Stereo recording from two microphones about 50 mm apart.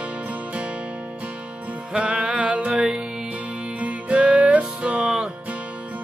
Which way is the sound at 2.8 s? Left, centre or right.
Centre.